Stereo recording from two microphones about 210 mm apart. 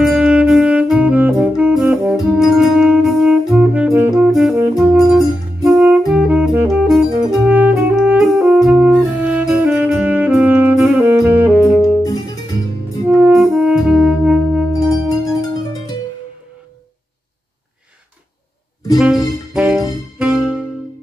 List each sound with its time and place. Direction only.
0.0 s saxophone: centre (ahead or behind)
5.7 s music: 5° right (ahead or behind)
13.0 s music: 10° right (ahead or behind)
15.4 s music: 15° left (ahead or behind)
18.9 s music: 5° right (ahead or behind)